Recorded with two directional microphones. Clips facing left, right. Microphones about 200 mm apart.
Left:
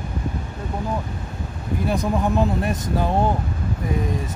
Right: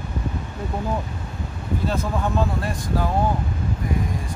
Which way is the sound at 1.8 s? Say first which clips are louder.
Left 4 dB; 15° left (ahead or behind).